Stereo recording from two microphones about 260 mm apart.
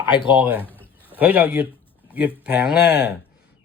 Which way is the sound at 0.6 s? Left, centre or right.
Centre.